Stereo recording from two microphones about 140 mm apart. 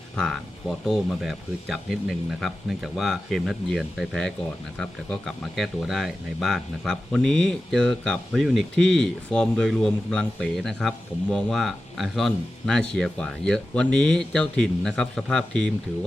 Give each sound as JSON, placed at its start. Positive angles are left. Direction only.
{"t": 0.9, "sound": "speech", "side_deg": 0}